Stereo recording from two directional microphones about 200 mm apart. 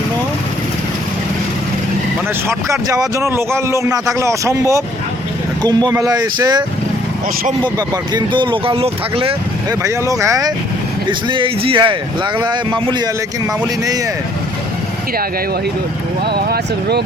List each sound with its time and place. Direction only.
2.5 s a man's voice: 15° right (ahead or behind)
7.8 s speech: 20° right (ahead or behind)
9.6 s a man's voice: 15° right (ahead or behind)
16.2 s speech: 55° right (ahead or behind)